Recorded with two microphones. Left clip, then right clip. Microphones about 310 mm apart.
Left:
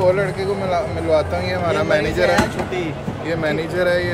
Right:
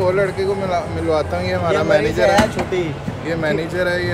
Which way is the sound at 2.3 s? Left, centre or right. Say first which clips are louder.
Right 3 dB; centre.